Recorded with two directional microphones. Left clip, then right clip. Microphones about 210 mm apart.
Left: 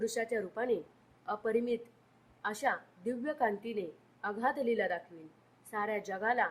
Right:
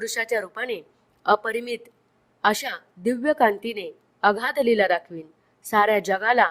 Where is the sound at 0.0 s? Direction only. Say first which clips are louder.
Right 9 dB; 45° right (ahead or behind).